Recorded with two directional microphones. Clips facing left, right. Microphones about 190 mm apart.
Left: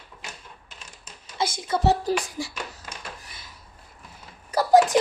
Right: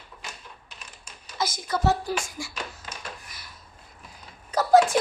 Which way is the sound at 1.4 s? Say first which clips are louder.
Left 2 dB; 25° left (ahead or behind).